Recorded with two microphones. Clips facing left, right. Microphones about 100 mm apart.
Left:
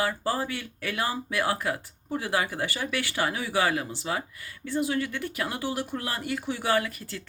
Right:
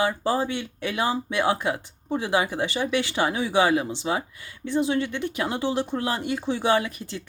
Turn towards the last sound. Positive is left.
turn(degrees=-20)  # may be behind; listen again after turning